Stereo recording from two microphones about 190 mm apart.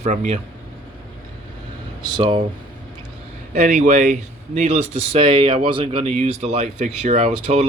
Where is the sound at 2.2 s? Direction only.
25° right (ahead or behind).